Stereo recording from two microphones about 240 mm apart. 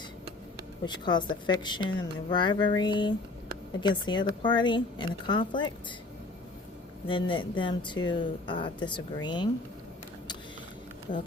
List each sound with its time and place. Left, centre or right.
0.9 s a woman's voice: centre
7.1 s a woman's voice: left